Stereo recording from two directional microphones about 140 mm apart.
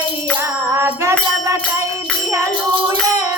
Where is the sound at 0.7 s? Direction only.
20° right (ahead or behind).